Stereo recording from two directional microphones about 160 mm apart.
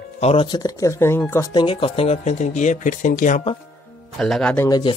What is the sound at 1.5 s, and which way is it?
Speech, 30° left (ahead or behind).